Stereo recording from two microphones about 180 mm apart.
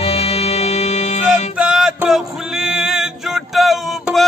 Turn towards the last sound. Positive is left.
turn(degrees=0)  # may be behind; listen again after turning